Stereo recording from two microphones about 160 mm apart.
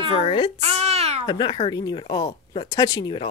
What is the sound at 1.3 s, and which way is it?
Speech, 30° left (ahead or behind).